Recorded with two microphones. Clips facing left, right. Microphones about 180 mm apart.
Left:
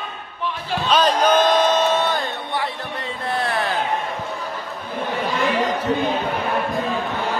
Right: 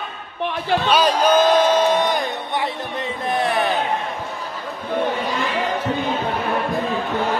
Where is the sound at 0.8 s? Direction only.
10° right (ahead or behind).